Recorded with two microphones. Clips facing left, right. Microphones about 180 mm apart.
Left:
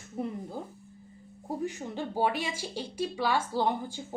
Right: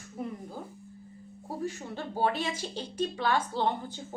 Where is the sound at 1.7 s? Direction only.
15° left (ahead or behind).